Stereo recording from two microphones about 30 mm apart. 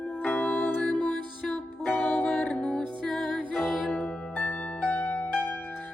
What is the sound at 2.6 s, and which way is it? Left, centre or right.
Music, left.